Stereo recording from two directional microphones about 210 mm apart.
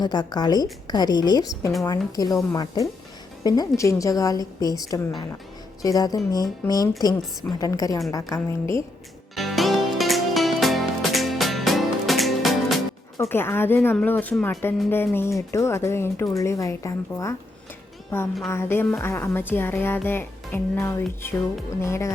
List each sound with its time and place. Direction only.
0.0 s a woman's voice: 20° left (ahead or behind)
9.3 s music: centre (ahead or behind)
13.1 s speech: 10° left (ahead or behind)